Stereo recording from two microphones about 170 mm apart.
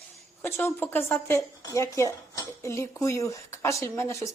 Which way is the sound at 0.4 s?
10° left (ahead or behind).